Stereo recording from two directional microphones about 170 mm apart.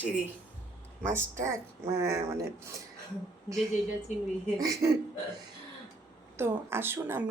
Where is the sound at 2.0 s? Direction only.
15° right (ahead or behind).